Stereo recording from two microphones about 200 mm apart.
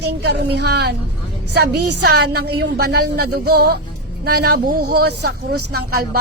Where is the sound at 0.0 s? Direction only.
55° right (ahead or behind).